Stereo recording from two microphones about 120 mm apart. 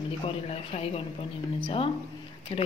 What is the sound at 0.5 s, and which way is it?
Speech, 55° left (ahead or behind).